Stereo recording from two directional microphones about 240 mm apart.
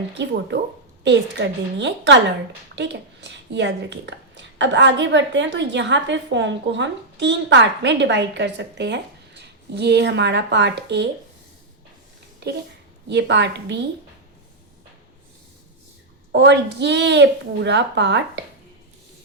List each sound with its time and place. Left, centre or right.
0.1 s speech: right
12.4 s a child's voice: right
16.3 s speech: right